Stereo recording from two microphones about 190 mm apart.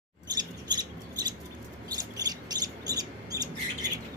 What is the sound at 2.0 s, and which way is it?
Bird, 20° right (ahead or behind).